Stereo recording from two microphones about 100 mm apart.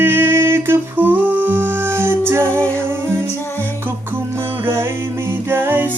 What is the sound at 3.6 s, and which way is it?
Music, 20° right (ahead or behind).